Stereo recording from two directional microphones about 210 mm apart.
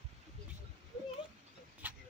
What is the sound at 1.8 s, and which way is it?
Vehicle, 10° right (ahead or behind).